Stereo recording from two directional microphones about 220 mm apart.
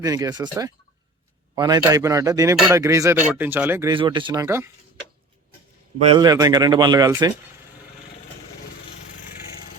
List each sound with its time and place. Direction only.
0.0 s speech: 15° right (ahead or behind)
6.0 s speech: 25° right (ahead or behind)